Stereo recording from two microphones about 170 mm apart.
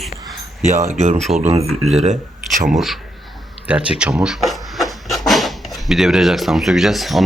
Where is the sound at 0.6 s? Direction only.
45° right (ahead or behind).